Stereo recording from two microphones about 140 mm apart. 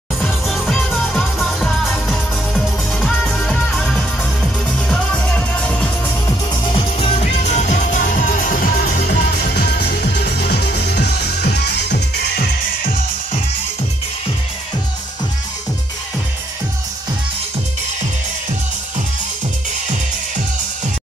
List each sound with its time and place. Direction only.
0.2 s music: centre (ahead or behind)
6.5 s music: 35° left (ahead or behind); by 9.0 s 90° left
12.4 s music: 65° left (ahead or behind)